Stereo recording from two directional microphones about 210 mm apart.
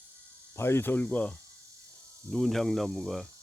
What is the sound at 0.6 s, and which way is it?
Speech, 10° left (ahead or behind).